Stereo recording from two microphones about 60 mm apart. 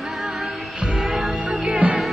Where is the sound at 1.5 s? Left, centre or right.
Centre.